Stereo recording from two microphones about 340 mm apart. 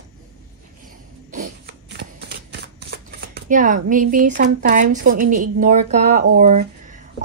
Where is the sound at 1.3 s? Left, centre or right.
Right.